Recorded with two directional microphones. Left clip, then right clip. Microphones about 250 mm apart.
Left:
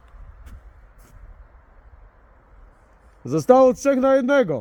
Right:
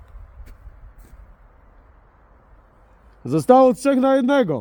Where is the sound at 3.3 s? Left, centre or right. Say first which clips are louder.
Right 1 dB; centre.